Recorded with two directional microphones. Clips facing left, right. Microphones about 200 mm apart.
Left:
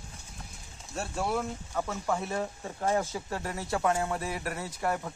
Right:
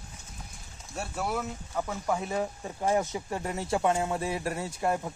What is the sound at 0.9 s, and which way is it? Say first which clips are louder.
Speech: left 1 dB; 5° right (ahead or behind).